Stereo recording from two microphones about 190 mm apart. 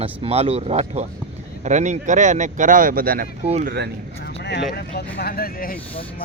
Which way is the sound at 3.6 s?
60° right (ahead or behind).